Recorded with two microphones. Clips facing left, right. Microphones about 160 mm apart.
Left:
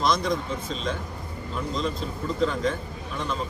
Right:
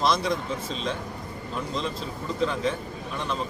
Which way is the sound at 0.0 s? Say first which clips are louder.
Even; 5° right (ahead or behind).